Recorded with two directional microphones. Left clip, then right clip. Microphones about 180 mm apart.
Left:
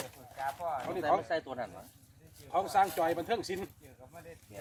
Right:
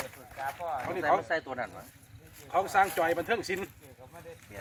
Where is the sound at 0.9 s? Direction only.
20° left (ahead or behind).